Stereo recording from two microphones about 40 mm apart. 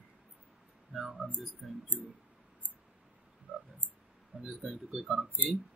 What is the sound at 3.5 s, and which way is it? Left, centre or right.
Frog, right.